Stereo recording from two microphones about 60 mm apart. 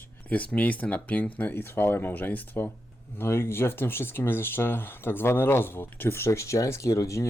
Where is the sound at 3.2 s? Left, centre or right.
Left.